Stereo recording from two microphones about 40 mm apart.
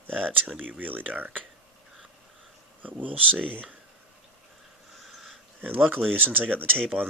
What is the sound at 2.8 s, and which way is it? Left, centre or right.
Speech, right.